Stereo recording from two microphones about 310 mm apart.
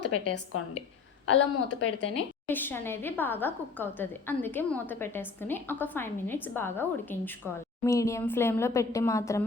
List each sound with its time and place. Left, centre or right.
0.0 s a woman's voice: left
2.5 s a woman's voice: centre